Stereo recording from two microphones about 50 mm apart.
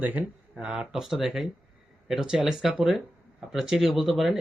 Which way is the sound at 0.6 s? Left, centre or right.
Centre.